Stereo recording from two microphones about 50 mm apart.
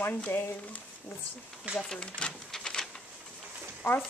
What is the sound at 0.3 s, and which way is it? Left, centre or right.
Speech, left.